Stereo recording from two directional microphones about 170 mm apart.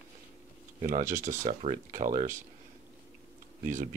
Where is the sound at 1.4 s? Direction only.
45° right (ahead or behind).